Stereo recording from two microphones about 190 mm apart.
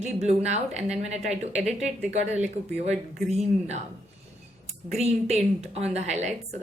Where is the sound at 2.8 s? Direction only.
35° right (ahead or behind).